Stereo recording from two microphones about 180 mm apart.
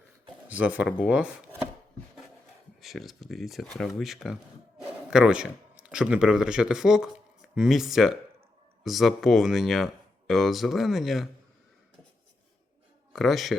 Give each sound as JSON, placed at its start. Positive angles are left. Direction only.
{"t": 0.4, "sound": "speech", "side_deg": -10}
{"t": 2.8, "sound": "speech", "side_deg": 0}
{"t": 13.1, "sound": "speech", "side_deg": 0}